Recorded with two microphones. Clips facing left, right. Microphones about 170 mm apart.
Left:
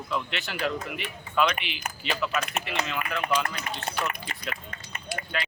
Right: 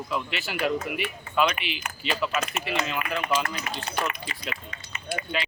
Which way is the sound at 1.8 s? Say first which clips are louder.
Even; 40° left (ahead or behind).